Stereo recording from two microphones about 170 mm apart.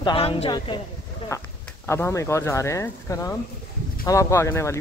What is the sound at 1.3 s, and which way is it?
Speech, 15° left (ahead or behind).